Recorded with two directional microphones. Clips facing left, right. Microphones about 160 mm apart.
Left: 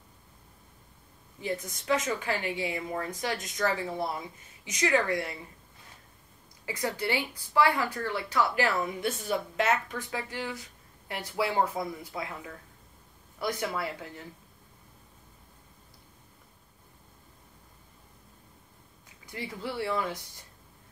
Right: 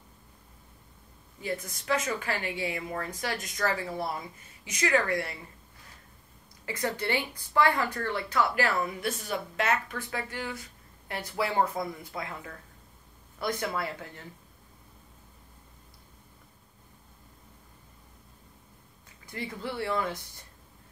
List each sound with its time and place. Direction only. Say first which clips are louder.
1.4 s a woman's voice: left 1 dB; 20° left (ahead or behind)
6.6 s a woman's voice: even; 15° left (ahead or behind)
19.3 s a woman's voice: even; 10° left (ahead or behind)